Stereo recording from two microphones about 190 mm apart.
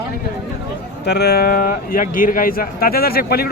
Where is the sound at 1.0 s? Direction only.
60° left (ahead or behind).